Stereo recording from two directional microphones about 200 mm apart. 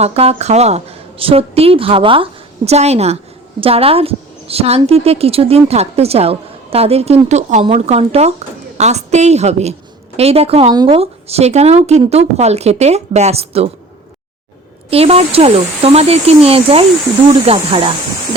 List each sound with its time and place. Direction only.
0.0 s a woman's voice: 30° right (ahead or behind)
14.8 s speech: 30° right (ahead or behind)